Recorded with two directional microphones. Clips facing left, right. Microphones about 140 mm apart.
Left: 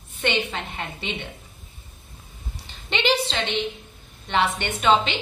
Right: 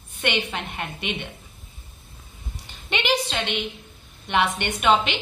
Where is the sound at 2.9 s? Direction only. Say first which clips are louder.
Left 1 dB; 10° right (ahead or behind).